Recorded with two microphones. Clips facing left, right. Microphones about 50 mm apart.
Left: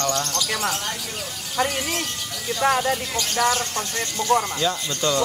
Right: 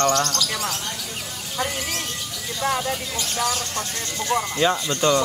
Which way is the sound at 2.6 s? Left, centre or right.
Left.